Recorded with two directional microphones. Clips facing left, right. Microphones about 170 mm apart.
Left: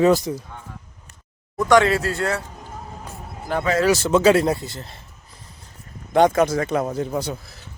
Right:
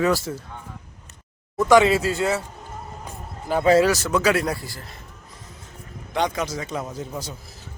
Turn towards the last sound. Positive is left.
turn(degrees=65)  # may be behind; listen again after turning